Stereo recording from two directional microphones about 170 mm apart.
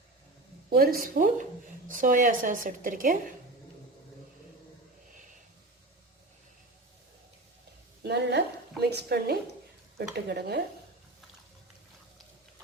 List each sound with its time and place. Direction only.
0.7 s a woman's voice: 60° right (ahead or behind)
8.0 s a sound: 75° right (ahead or behind)
10.2 s speech: 70° right (ahead or behind)